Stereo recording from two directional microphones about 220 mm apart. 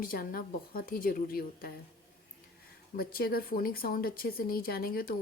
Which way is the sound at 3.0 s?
45° left (ahead or behind).